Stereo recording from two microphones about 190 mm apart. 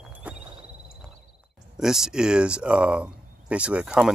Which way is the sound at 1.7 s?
Centre (ahead or behind).